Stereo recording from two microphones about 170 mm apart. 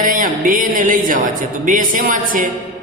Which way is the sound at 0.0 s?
50° right (ahead or behind).